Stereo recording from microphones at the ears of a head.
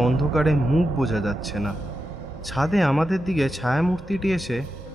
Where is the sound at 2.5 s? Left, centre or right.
Centre.